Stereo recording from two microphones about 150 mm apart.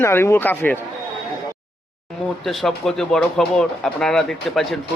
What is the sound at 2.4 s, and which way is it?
Speech, centre (ahead or behind).